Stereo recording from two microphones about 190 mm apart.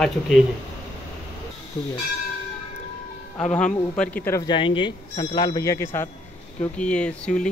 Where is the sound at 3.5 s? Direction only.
5° left (ahead or behind).